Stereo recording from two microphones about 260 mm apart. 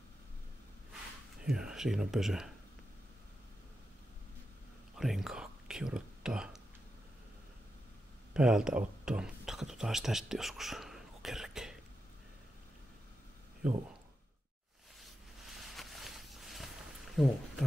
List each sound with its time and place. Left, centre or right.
1.4 s speech: centre
4.9 s whispering: centre
8.3 s speech: centre
15.0 s a sound: centre